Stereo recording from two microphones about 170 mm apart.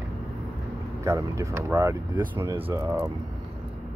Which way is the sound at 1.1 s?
15° right (ahead or behind).